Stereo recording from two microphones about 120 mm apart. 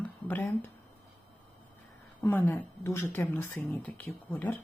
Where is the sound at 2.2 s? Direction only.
20° left (ahead or behind).